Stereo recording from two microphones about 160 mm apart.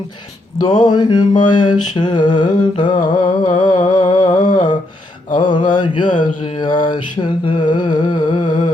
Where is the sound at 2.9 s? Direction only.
55° left (ahead or behind).